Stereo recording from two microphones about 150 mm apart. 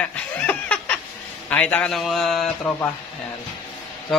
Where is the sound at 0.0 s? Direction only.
10° left (ahead or behind).